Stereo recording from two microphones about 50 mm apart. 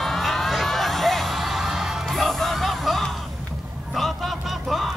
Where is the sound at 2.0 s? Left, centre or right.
Centre.